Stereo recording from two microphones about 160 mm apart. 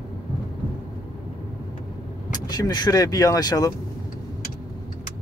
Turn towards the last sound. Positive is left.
turn(degrees=25)  # may be behind; listen again after turning